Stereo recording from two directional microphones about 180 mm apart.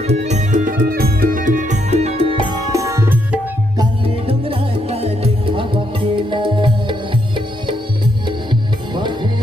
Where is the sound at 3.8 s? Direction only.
30° right (ahead or behind).